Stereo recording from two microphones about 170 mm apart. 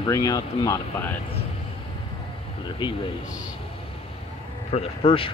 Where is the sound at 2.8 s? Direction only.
25° left (ahead or behind).